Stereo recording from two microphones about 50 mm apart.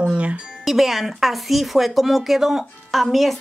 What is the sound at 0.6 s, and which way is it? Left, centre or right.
Speech, centre.